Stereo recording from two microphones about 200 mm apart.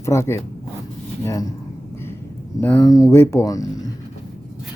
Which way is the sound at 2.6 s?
15° left (ahead or behind).